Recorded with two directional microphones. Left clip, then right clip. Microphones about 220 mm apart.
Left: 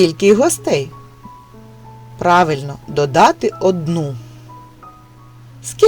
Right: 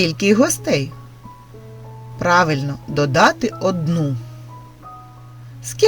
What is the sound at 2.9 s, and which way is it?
Speech, 15° left (ahead or behind).